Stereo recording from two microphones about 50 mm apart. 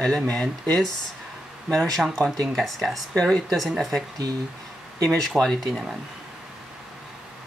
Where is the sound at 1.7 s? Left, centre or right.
Centre.